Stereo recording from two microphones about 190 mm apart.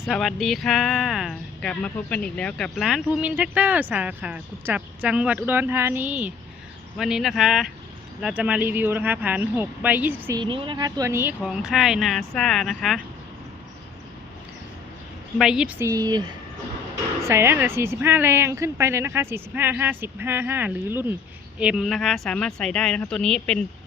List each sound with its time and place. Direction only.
0.0 s speech: centre (ahead or behind)
10.3 s speech: 25° right (ahead or behind); by 13.0 s centre (ahead or behind)
15.4 s speech: 5° right (ahead or behind)
15.8 s speech: 20° right (ahead or behind); by 23.6 s 5° left (ahead or behind)